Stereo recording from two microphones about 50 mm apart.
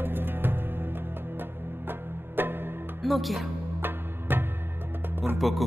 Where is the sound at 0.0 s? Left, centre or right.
Right.